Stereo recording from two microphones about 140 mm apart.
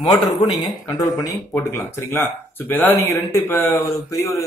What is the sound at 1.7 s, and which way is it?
Speech, 15° left (ahead or behind).